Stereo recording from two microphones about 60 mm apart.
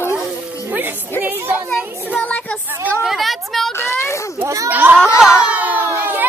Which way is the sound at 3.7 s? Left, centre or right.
Left.